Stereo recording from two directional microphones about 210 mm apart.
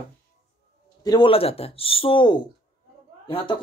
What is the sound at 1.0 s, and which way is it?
Speech, 20° left (ahead or behind).